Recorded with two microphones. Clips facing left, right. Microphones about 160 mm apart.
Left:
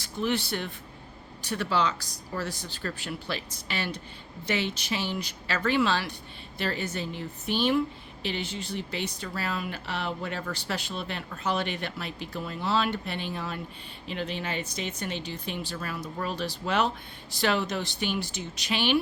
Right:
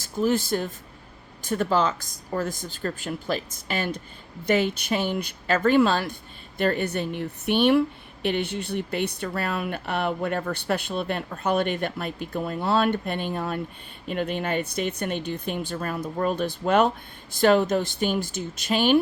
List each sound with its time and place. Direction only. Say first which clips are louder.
0.0 s a woman's voice: right 5 dB; 45° right (ahead or behind)